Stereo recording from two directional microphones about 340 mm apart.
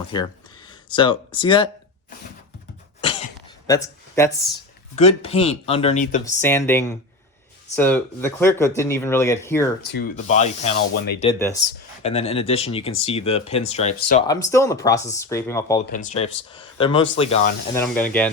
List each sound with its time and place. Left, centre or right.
0.1 s speech: centre
3.0 s cough: centre
3.7 s speech: centre
6.2 s speech: centre
9.8 s speech: left
11.3 s speech: centre
15.9 s speech: centre
17.7 s speech: centre